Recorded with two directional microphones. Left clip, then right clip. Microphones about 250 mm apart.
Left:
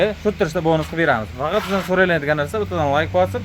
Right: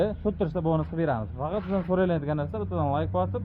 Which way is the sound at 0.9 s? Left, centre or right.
Centre.